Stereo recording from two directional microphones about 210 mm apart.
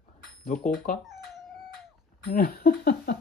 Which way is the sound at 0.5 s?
40° left (ahead or behind).